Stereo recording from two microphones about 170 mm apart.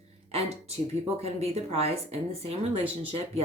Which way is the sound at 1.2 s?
35° right (ahead or behind).